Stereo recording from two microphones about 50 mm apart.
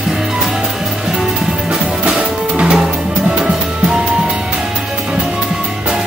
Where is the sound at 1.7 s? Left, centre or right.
Centre.